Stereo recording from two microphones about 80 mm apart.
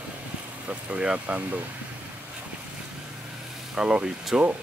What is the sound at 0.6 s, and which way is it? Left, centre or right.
Speech, centre.